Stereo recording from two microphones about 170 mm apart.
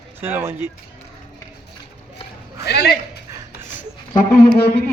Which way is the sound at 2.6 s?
75° left (ahead or behind).